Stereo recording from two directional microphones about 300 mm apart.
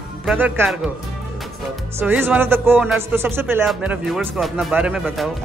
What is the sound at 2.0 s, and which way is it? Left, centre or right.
Speech, centre.